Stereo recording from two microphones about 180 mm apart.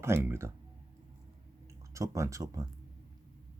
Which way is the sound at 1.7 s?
15° right (ahead or behind).